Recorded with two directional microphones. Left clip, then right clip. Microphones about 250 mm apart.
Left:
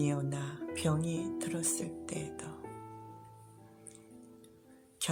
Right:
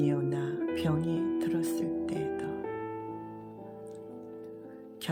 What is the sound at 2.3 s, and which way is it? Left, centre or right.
Music, right.